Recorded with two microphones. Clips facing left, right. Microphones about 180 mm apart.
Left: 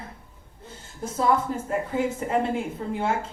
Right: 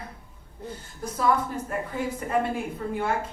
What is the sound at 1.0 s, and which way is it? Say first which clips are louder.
A woman's voice: left 2 dB; 25° left (ahead or behind).